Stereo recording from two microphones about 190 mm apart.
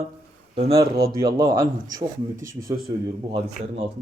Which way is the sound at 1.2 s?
15° right (ahead or behind).